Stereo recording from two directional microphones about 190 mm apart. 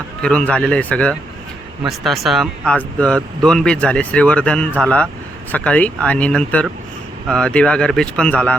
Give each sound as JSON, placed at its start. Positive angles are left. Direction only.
{"t": 0.2, "sound": "speech", "side_deg": 5}